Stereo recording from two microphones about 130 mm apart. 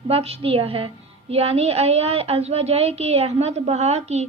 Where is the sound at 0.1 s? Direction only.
50° right (ahead or behind).